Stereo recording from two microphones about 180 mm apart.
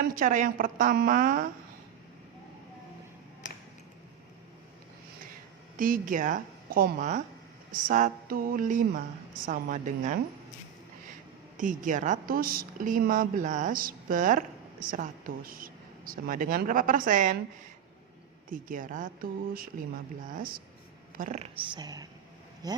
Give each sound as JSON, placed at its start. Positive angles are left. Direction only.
{"t": 0.0, "sound": "speech", "side_deg": -45}
{"t": 5.7, "sound": "a woman's voice", "side_deg": -50}
{"t": 11.5, "sound": "speech", "side_deg": -45}
{"t": 18.5, "sound": "speech", "side_deg": -50}
{"t": 21.8, "sound": "a woman's voice", "side_deg": -20}